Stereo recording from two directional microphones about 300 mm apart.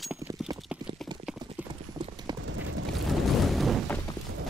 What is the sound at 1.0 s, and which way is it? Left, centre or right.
Clip-clop, centre.